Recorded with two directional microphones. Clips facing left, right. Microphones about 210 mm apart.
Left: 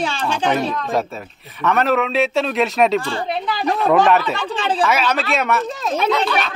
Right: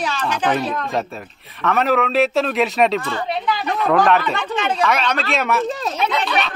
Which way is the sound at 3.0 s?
35° left (ahead or behind).